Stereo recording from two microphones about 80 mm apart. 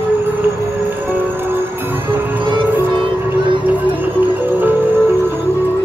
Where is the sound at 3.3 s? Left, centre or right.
Right.